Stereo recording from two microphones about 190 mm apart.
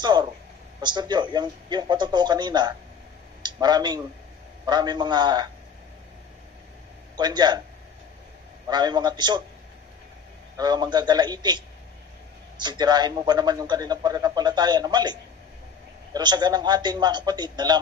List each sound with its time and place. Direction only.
0.0 s a sound: 25° right (ahead or behind)
0.7 s a man's voice: 25° right (ahead or behind)
7.2 s a man's voice: 20° right (ahead or behind)
8.6 s a man's voice: 20° right (ahead or behind)
10.6 s a man's voice: 20° right (ahead or behind)